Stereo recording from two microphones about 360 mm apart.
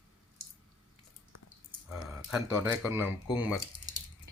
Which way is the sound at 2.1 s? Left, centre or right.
Centre.